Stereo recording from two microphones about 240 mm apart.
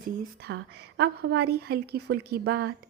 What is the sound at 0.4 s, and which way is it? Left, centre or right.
A woman's voice, right.